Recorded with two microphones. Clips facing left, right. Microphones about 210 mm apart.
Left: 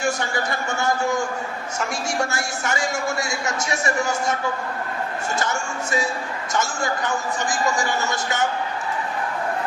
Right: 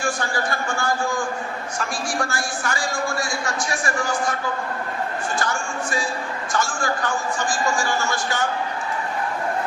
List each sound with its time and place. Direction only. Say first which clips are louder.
0.7 s a man's voice: left 4 dB; 20° left (ahead or behind)
5.4 s a man's voice: even; 25° left (ahead or behind)